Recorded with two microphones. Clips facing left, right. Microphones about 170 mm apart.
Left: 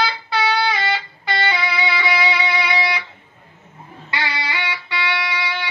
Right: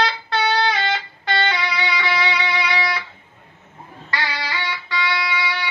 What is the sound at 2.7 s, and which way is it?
Music, 25° left (ahead or behind).